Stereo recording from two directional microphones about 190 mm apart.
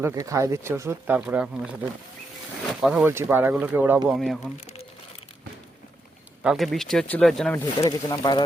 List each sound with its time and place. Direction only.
0.0 s speech: 15° right (ahead or behind)
2.8 s speech: 5° right (ahead or behind)
4.2 s speech: centre (ahead or behind)
6.4 s speech: centre (ahead or behind)
7.8 s speech: 20° left (ahead or behind)